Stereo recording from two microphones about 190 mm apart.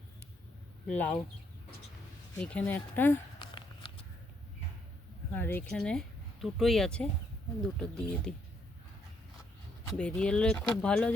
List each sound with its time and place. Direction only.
0.9 s speech: 10° left (ahead or behind)
2.3 s speech: 5° left (ahead or behind)
3.3 s a sound: 25° left (ahead or behind)
5.3 s speech: 10° left (ahead or behind)
9.8 s speech: 5° left (ahead or behind)